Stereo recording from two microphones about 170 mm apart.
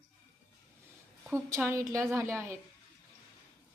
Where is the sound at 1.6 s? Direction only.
15° right (ahead or behind).